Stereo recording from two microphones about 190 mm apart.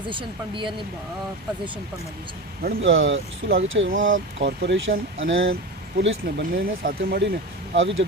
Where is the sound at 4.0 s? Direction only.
90° right.